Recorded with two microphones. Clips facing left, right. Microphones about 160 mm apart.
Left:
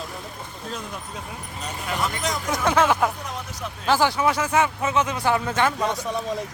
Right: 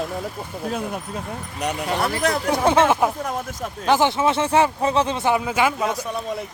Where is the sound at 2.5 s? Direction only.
30° right (ahead or behind).